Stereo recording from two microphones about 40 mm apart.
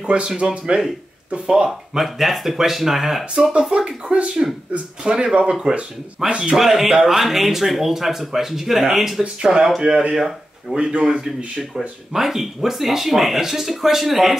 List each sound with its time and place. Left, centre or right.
0.0 s speech: right
2.0 s speech: centre
3.7 s speech: right
6.5 s speech: centre
9.2 s speech: right
10.8 s speech: right
12.1 s speech: centre